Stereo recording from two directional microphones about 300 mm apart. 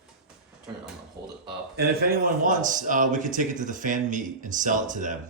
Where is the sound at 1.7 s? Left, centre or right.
Right.